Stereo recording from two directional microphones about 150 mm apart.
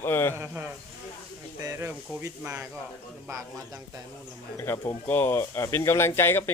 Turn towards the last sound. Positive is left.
turn(degrees=15)  # may be behind; listen again after turning